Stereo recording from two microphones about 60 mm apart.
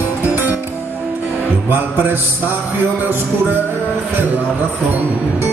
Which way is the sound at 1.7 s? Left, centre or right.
Right.